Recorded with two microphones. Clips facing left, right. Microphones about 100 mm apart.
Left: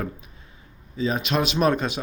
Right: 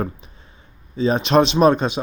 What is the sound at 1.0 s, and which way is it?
Speech, 30° right (ahead or behind).